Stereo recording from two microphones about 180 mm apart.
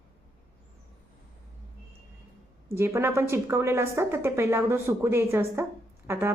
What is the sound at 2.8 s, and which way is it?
A woman's voice, 15° right (ahead or behind).